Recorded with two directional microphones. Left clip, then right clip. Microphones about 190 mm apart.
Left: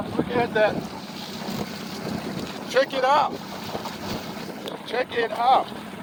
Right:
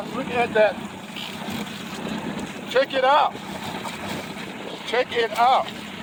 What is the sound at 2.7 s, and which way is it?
Speech, 45° right (ahead or behind).